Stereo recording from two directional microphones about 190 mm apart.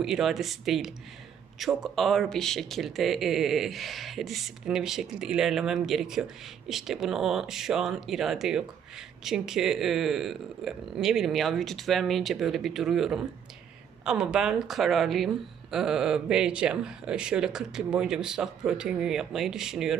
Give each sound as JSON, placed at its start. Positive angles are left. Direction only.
{"t": 0.0, "sound": "speech", "side_deg": 0}